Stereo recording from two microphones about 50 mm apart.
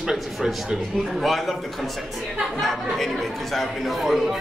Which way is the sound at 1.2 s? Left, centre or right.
Centre.